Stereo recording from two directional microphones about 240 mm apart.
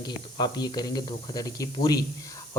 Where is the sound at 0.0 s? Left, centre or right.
Centre.